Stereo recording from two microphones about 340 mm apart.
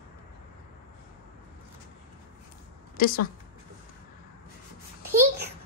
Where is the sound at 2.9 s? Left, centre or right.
Left.